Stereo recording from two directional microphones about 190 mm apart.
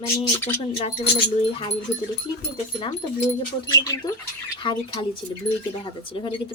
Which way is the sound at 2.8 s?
20° left (ahead or behind).